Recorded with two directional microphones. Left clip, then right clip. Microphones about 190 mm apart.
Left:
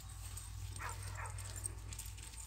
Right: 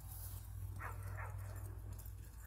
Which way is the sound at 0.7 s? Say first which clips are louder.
Left 3 dB; 60° right (ahead or behind).